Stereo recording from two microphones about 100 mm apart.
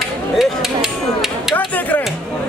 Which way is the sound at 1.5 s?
15° left (ahead or behind).